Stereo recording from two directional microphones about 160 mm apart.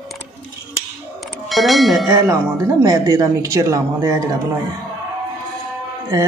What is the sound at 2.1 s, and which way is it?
Speech, 15° right (ahead or behind).